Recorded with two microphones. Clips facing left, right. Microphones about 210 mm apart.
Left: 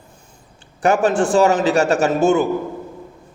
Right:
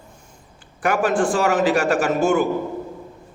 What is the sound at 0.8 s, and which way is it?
A man's voice, 25° left (ahead or behind).